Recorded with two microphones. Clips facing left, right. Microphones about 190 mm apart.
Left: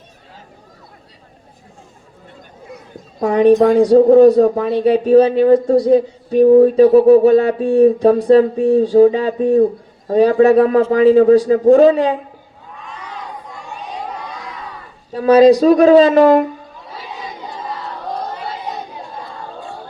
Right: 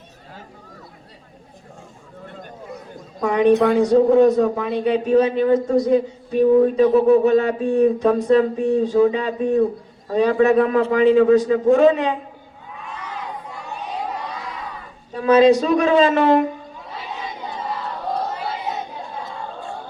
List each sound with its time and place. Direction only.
3.2 s a woman's voice: 35° left (ahead or behind)
15.1 s a man's voice: 35° left (ahead or behind)
18.3 s chatter: 5° right (ahead or behind)